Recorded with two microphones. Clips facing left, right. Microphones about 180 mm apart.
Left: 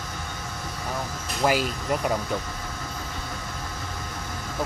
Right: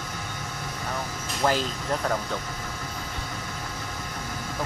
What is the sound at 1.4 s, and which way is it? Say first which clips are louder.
Speech: left 2 dB; 10° left (ahead or behind).